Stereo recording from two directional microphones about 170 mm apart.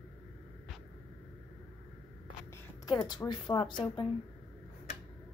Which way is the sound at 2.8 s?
25° left (ahead or behind).